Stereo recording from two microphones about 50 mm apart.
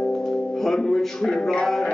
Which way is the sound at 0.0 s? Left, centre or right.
Centre.